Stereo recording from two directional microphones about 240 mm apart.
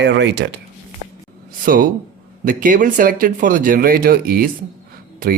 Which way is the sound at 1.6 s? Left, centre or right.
Right.